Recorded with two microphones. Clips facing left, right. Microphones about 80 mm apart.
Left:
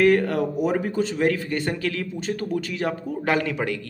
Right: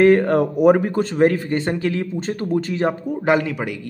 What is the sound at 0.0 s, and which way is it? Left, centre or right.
A man's voice, right.